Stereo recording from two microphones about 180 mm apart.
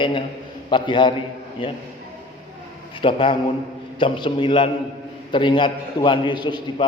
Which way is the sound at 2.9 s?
30° left (ahead or behind).